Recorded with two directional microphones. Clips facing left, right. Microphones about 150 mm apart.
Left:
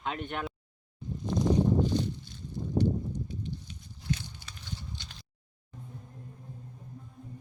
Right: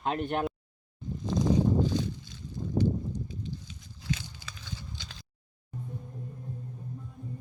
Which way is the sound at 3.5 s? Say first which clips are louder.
Even; 90° right.